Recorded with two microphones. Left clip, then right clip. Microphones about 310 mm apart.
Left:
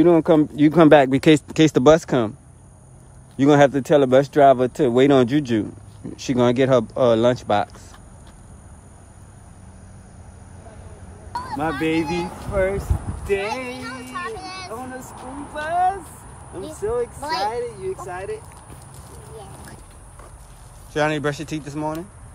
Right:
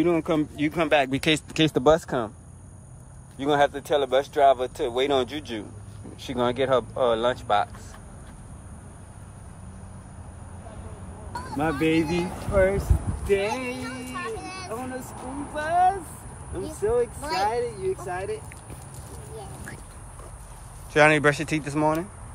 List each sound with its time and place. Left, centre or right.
0.0 s speech: left
3.3 s speech: left
11.3 s speech: centre
20.9 s speech: centre